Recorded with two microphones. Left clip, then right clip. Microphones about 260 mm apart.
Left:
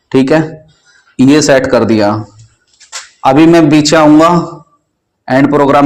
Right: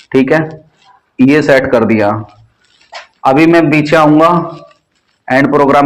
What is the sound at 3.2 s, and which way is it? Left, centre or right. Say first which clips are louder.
A man's voice: left 2 dB; left.